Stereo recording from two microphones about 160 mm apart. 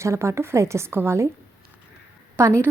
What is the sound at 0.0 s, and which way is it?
A woman's voice, 20° right (ahead or behind).